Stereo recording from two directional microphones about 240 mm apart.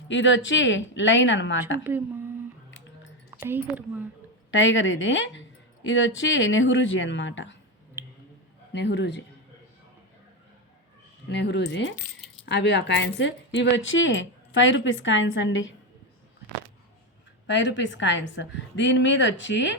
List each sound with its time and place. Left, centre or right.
0.1 s a woman's voice: left
1.8 s speech: centre
3.4 s speech: centre
4.5 s a woman's voice: left
8.7 s a woman's voice: left
11.3 s a woman's voice: left
17.4 s a woman's voice: left